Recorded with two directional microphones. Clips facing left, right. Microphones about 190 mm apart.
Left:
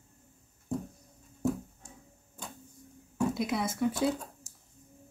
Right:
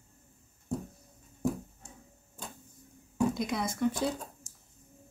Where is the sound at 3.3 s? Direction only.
5° left (ahead or behind).